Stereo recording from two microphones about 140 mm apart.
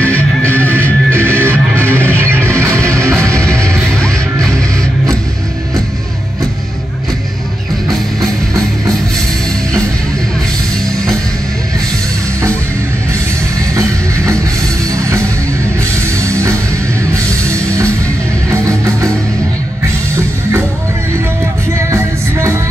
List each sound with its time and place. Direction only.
0.5 s music: 10° left (ahead or behind)
2.6 s music: 20° right (ahead or behind)
3.3 s music: 5° left (ahead or behind)
14.9 s music: 20° right (ahead or behind)
18.5 s music: 20° right (ahead or behind)
21.9 s music: 20° right (ahead or behind)